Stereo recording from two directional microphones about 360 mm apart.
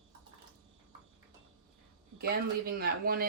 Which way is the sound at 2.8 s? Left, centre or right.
Right.